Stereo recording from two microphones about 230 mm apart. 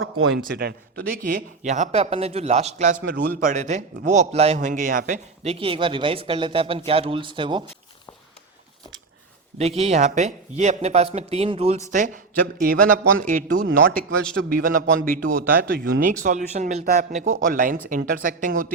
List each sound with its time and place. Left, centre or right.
0.5 s a man's voice: right
9.6 s a man's voice: right